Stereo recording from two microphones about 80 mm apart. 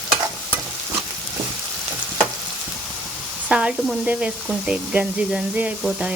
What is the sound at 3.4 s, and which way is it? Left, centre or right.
Speech, centre.